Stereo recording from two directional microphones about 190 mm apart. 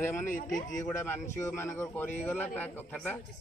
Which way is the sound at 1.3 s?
15° left (ahead or behind).